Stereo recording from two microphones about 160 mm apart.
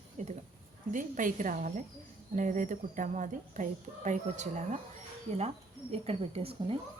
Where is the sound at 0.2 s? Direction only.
50° right (ahead or behind).